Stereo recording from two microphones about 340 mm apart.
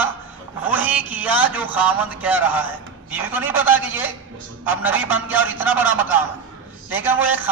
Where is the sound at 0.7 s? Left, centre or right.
Centre.